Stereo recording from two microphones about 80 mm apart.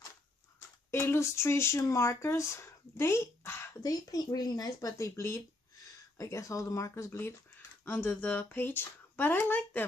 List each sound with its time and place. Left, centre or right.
0.9 s speech: left
3.8 s speech: left